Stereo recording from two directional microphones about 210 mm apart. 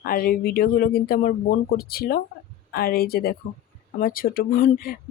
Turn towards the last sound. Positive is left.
turn(degrees=45)  # may be behind; listen again after turning